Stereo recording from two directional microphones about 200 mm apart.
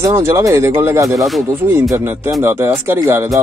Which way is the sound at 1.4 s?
10° right (ahead or behind).